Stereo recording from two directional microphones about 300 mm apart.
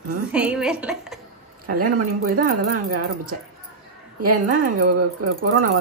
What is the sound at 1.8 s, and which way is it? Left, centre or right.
Speech, right.